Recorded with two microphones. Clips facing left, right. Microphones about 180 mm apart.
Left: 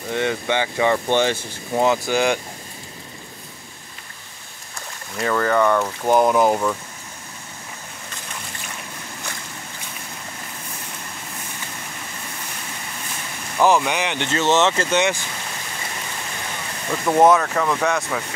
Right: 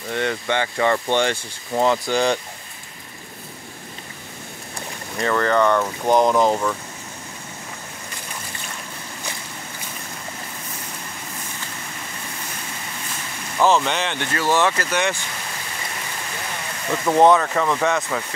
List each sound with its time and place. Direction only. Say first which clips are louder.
0.1 s speech: left 1 dB; 10° left (ahead or behind)
5.2 s speech: even; 5° left (ahead or behind)
13.6 s speech: left 1 dB; 10° left (ahead or behind)
17.0 s speech: even; centre (ahead or behind)